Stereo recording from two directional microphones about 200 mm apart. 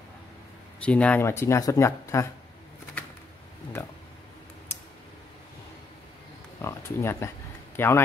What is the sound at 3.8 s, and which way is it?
Speech, 10° left (ahead or behind).